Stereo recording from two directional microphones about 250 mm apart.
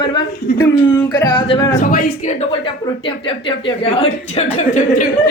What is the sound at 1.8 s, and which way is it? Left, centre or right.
Speech, left.